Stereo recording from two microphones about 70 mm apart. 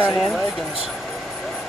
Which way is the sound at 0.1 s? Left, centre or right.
Centre.